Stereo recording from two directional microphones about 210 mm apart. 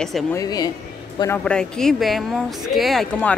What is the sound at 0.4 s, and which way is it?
Speech, 20° left (ahead or behind).